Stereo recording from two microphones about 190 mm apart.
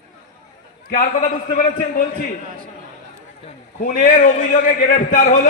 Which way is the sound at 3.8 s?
45° left (ahead or behind).